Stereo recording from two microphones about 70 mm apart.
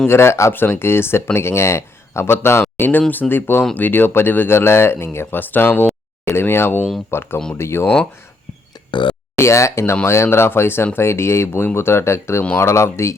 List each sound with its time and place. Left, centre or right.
0.1 s speech: left
0.5 s speech: left
8.9 s speech: left
9.4 s speech: left